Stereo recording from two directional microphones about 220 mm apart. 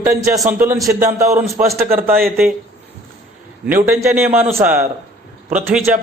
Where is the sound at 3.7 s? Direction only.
10° right (ahead or behind).